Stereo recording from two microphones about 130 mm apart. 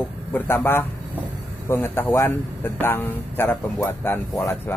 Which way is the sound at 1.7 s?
15° left (ahead or behind).